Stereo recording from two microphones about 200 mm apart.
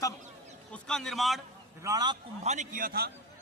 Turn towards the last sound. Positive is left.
turn(degrees=-50)  # may be behind; listen again after turning